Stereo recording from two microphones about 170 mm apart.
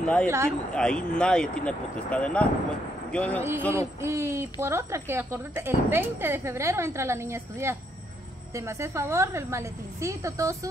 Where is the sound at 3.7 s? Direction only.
15° right (ahead or behind).